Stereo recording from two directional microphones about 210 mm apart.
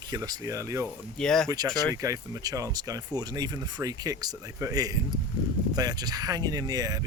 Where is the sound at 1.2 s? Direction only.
5° left (ahead or behind).